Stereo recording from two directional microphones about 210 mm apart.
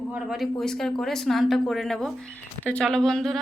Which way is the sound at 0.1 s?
Centre (ahead or behind).